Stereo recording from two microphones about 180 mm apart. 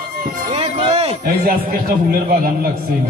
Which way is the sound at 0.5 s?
30° right (ahead or behind).